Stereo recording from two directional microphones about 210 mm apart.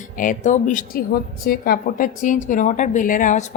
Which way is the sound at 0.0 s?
40° left (ahead or behind).